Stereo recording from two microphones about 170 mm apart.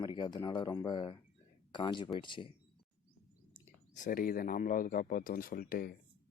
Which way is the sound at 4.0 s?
55° left (ahead or behind).